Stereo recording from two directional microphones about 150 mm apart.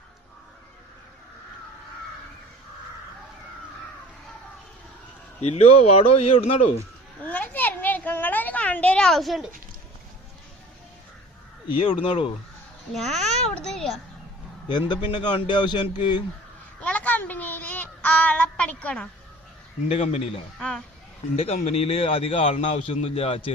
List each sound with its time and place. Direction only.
5.4 s a man's voice: 45° left (ahead or behind)
7.3 s a sound: 10° left (ahead or behind)
12.0 s a man's voice: 40° left (ahead or behind)
12.9 s a child's voice: centre (ahead or behind)
14.7 s a man's voice: 30° left (ahead or behind)
16.8 s child singing: 10° left (ahead or behind)
19.9 s a man's voice: 45° left (ahead or behind)
20.6 s a child's voice: 5° left (ahead or behind)
21.3 s a man's voice: 45° left (ahead or behind)